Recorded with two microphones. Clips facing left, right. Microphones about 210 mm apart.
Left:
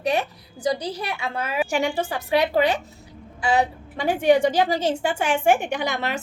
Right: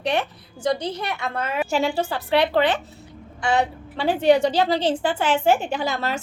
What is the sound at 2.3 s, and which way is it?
Speech, 10° left (ahead or behind).